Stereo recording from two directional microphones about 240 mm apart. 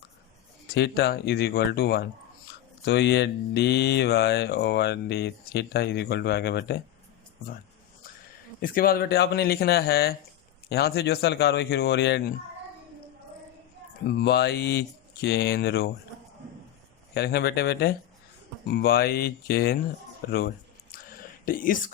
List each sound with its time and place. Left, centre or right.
0.7 s mantra: left
8.6 s speech: left
14.1 s mantra: left
17.2 s speech: left
20.9 s whispering: left